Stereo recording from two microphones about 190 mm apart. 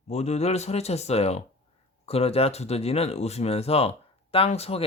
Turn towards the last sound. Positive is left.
turn(degrees=30)  # may be behind; listen again after turning